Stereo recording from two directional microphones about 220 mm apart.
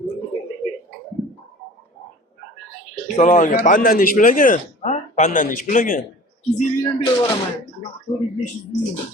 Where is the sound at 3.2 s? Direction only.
35° left (ahead or behind).